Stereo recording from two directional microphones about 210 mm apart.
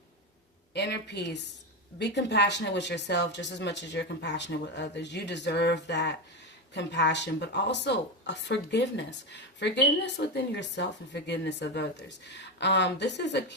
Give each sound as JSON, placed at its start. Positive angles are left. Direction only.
{"t": 0.7, "sound": "speech", "side_deg": 55}